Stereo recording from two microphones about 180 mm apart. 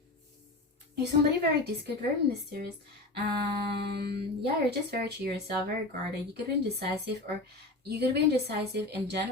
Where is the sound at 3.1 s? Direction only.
65° right (ahead or behind).